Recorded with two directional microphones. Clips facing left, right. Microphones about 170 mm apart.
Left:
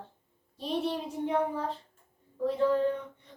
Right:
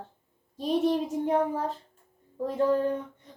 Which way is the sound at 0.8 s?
45° right (ahead or behind).